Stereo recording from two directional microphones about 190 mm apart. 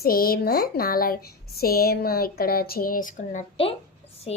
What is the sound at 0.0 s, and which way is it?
Speech, 50° left (ahead or behind).